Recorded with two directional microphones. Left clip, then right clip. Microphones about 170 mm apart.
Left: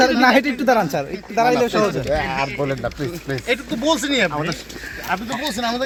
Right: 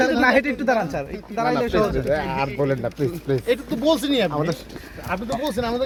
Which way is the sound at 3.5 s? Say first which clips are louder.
Left 2 dB; 90° right.